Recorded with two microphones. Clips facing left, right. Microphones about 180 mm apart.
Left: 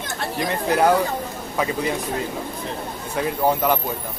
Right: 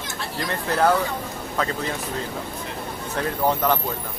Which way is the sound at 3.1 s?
10° left (ahead or behind).